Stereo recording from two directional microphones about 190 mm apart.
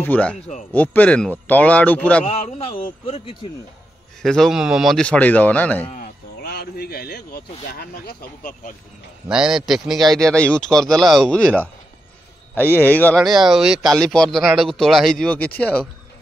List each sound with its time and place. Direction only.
0.0 s speech: 10° left (ahead or behind)
2.2 s a man's voice: 35° left (ahead or behind)
4.2 s speech: centre (ahead or behind)
6.4 s speech: 55° left (ahead or behind)
9.3 s speech: 5° right (ahead or behind)